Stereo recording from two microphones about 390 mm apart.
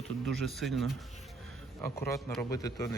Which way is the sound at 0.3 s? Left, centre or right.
Centre.